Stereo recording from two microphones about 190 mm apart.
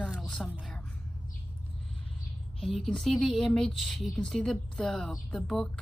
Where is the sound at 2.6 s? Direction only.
Centre (ahead or behind).